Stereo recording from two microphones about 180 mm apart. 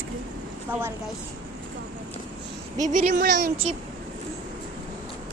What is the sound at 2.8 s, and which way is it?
Speech, 40° right (ahead or behind).